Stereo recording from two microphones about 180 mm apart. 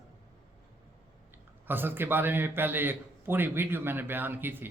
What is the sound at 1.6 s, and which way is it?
A man's voice, 10° right (ahead or behind).